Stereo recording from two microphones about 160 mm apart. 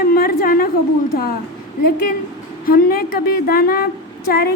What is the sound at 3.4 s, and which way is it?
Speech, 70° left (ahead or behind).